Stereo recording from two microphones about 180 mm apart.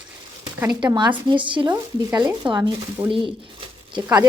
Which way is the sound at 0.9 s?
25° right (ahead or behind).